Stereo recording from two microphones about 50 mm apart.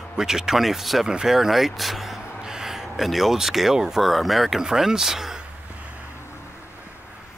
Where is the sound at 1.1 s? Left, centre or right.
Centre.